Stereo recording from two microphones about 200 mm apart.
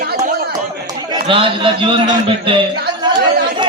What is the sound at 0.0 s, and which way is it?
Chatter, 45° right (ahead or behind).